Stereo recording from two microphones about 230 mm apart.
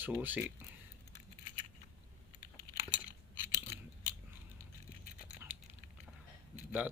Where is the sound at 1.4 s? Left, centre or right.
Left.